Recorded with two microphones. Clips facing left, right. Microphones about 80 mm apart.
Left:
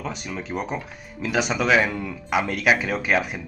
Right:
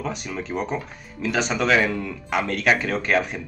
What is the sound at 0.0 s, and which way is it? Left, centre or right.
Speech, centre.